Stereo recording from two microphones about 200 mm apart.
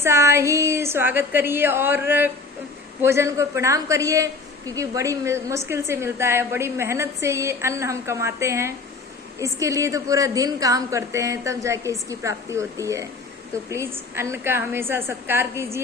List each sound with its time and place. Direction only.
0.0 s a woman's voice: 10° right (ahead or behind)